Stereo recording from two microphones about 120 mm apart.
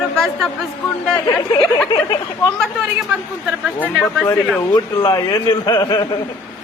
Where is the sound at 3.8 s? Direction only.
20° left (ahead or behind).